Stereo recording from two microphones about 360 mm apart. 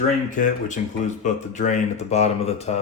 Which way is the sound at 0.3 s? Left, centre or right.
Left.